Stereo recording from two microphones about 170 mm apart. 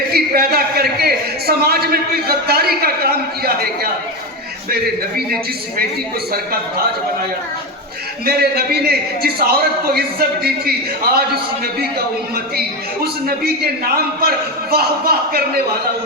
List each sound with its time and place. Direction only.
0.1 s a man's voice: 65° right (ahead or behind)
6.3 s a man's voice: 60° right (ahead or behind)
8.2 s a man's voice: 65° right (ahead or behind)